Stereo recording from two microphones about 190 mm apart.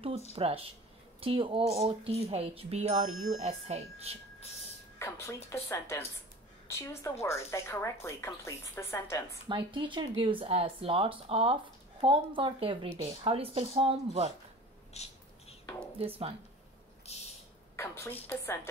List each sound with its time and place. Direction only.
0.4 s speech: 30° right (ahead or behind)
4.9 s speech: 15° left (ahead or behind)
9.5 s speech: 25° right (ahead or behind)
15.0 s bird: 35° left (ahead or behind)
16.0 s speech: 30° right (ahead or behind)
17.1 s a sound: 35° left (ahead or behind)
17.7 s a woman's voice: 15° left (ahead or behind)